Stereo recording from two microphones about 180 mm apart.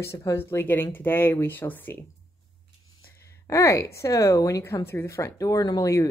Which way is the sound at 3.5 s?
15° left (ahead or behind).